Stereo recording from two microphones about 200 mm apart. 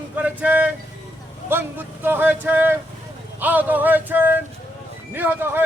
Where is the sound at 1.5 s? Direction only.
10° right (ahead or behind).